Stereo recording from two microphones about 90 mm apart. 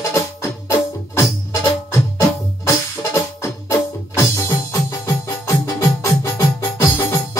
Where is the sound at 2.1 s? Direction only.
35° left (ahead or behind).